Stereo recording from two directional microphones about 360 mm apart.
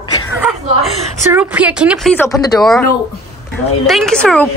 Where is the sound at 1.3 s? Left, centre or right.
Centre.